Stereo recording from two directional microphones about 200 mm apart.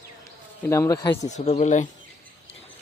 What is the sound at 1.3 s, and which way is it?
Speech, 35° left (ahead or behind).